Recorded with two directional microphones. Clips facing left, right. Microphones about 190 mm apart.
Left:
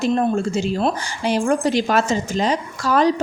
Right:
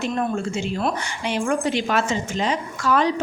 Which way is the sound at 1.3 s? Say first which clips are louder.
Left 4 dB; 40° left (ahead or behind).